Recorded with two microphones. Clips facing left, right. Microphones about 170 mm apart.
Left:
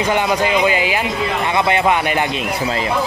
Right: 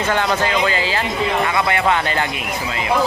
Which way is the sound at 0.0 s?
15° left (ahead or behind).